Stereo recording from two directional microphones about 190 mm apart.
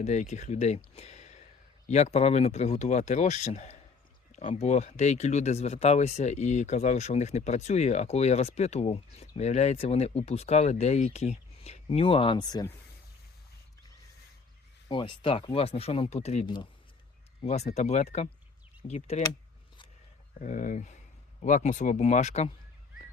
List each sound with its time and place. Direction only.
0.0 s speech: 35° left (ahead or behind); by 12.7 s 20° left (ahead or behind)
14.8 s speech: 25° left (ahead or behind)
20.4 s speech: 40° left (ahead or behind)